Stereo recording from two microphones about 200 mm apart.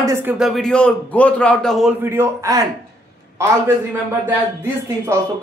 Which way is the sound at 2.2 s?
15° right (ahead or behind).